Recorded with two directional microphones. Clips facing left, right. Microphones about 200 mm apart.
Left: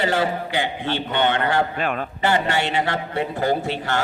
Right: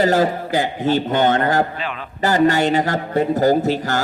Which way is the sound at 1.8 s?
50° left (ahead or behind).